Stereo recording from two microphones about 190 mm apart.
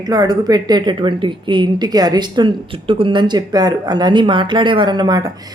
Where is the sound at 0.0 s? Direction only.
20° right (ahead or behind).